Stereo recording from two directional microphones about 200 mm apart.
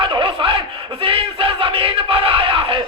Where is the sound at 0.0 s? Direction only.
25° right (ahead or behind).